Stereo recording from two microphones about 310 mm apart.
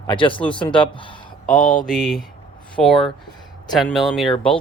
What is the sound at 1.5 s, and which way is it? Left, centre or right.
Mantra, left.